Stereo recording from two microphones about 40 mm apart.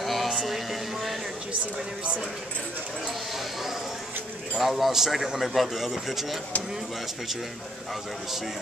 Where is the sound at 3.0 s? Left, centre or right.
Centre.